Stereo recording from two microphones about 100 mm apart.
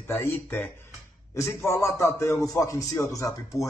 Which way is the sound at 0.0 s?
25° left (ahead or behind).